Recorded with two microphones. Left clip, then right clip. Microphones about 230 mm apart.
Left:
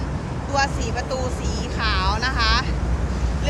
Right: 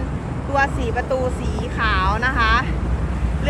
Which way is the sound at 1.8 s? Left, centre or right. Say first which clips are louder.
Right 3 dB; centre.